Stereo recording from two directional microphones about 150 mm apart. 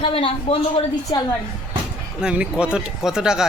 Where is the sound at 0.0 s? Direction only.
35° left (ahead or behind).